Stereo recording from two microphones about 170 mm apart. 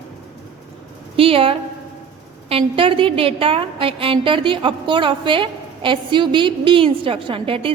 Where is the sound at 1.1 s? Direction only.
35° right (ahead or behind).